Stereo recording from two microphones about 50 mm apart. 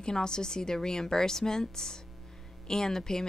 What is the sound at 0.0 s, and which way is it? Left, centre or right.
Speech, centre.